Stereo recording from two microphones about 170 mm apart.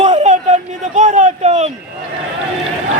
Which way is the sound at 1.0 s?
45° right (ahead or behind).